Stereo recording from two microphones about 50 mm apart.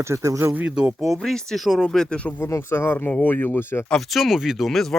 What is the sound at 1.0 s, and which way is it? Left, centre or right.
Speech, centre.